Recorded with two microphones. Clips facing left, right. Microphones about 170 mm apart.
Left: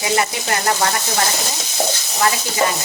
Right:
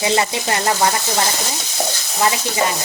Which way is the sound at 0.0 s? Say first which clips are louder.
Right 2 dB; 25° right (ahead or behind).